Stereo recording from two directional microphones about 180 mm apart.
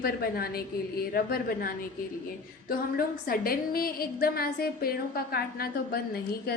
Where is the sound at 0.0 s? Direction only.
55° left (ahead or behind).